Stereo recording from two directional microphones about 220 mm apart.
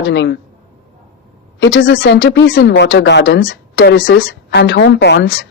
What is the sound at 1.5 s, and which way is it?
Speech, 60° left (ahead or behind).